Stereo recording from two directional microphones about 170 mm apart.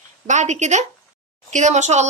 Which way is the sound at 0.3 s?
45° right (ahead or behind).